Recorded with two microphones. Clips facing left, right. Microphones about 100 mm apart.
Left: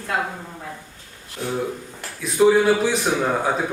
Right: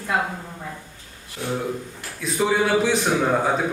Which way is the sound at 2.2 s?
Centre (ahead or behind).